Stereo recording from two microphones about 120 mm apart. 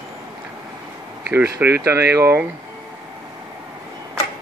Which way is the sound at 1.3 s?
20° right (ahead or behind).